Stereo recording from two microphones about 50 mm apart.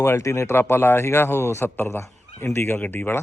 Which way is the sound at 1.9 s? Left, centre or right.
Left.